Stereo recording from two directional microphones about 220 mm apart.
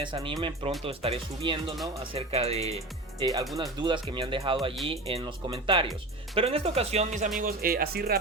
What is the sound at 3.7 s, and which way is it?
Speech, 20° right (ahead or behind).